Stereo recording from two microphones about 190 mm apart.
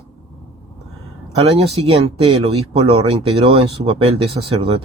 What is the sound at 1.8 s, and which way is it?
Speech, 30° right (ahead or behind).